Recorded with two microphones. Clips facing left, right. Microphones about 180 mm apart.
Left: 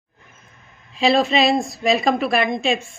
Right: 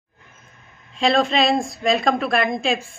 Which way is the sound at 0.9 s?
5° left (ahead or behind).